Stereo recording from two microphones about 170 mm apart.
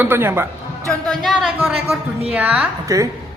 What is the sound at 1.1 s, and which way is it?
A woman's voice, centre (ahead or behind).